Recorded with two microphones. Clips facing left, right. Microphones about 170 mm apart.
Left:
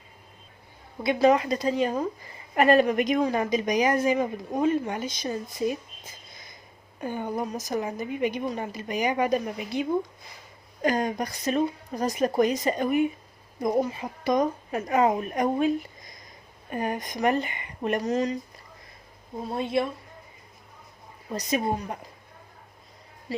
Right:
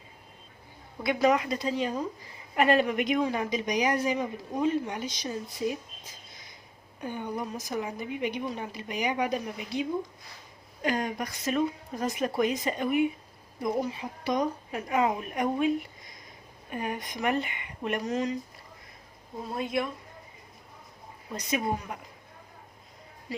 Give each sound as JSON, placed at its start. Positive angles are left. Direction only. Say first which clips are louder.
{"t": 1.0, "sound": "a woman's voice", "louder": "left 4 dB", "side_deg": 30}
{"t": 7.0, "sound": "a woman's voice", "louder": "left 4 dB", "side_deg": 45}
{"t": 10.8, "sound": "a woman's voice", "louder": "left 4 dB", "side_deg": 40}
{"t": 16.7, "sound": "a woman's voice", "louder": "left 4 dB", "side_deg": 40}
{"t": 19.5, "sound": "speech", "louder": "left 4 dB", "side_deg": 30}
{"t": 21.3, "sound": "a woman's voice", "louder": "left 3 dB", "side_deg": 35}